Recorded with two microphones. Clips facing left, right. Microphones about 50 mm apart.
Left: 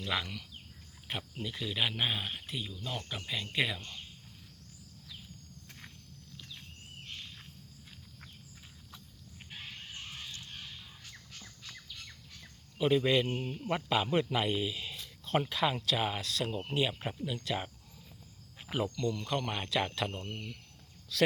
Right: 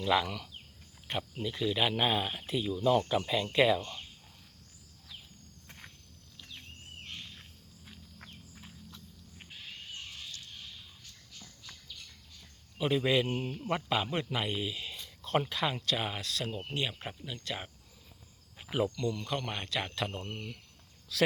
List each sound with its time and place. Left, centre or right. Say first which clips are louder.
0.0 s a man's voice: right 6 dB; centre
11.3 s squawk: right 1 dB; left
12.8 s a man's voice: left 1 dB; centre
18.7 s a man's voice: right 2 dB; centre